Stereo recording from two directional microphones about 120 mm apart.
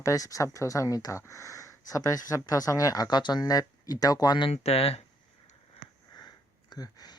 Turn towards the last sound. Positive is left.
turn(degrees=35)  # may be behind; listen again after turning